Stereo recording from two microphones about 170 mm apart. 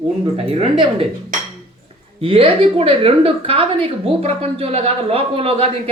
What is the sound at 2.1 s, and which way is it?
A woman's voice, 30° right (ahead or behind).